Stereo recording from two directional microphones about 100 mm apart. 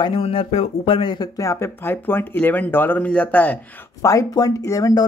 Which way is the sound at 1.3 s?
30° left (ahead or behind).